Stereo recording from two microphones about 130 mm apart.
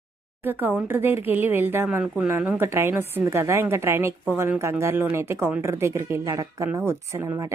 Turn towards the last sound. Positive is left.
turn(degrees=-20)  # may be behind; listen again after turning